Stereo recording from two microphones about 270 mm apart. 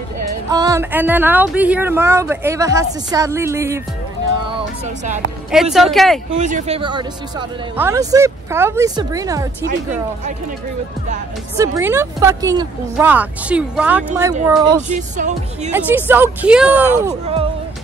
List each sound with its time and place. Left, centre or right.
0.5 s speech: centre
4.5 s speech: right
5.5 s speech: centre
6.3 s speech: right
11.5 s speech: centre
15.0 s speech: right
15.7 s speech: centre